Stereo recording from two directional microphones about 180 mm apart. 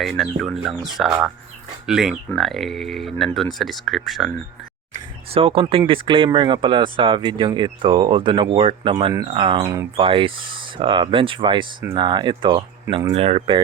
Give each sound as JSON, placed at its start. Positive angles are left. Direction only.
{"t": 0.0, "sound": "speech", "side_deg": 0}
{"t": 5.3, "sound": "speech", "side_deg": -30}